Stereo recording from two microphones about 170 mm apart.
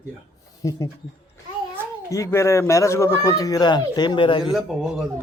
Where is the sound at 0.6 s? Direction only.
20° left (ahead or behind).